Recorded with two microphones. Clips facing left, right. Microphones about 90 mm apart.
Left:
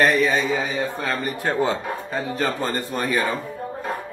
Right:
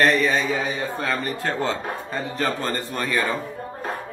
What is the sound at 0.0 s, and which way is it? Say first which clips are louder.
Speech: left 1 dB; 5° left (ahead or behind).